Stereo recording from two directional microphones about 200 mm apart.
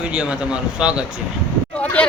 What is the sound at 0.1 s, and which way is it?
Speech, 5° right (ahead or behind).